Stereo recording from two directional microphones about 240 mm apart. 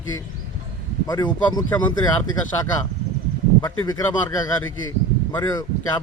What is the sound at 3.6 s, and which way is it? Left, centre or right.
Speech, centre.